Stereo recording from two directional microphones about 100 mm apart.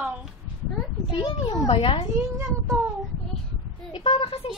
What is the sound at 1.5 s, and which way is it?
Speech, 65° left (ahead or behind).